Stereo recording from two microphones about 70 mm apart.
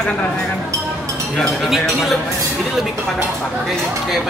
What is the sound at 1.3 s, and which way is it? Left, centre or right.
Speech, centre.